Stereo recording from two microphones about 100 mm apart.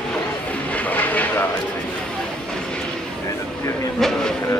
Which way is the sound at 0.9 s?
15° left (ahead or behind).